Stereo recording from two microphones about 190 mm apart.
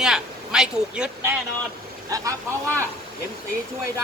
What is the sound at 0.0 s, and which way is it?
Speech, 5° right (ahead or behind).